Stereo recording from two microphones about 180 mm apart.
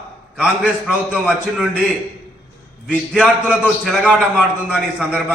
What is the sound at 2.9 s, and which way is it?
A man's voice, 5° right (ahead or behind).